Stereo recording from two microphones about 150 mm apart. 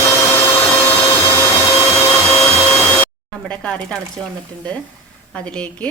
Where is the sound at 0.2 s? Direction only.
15° left (ahead or behind).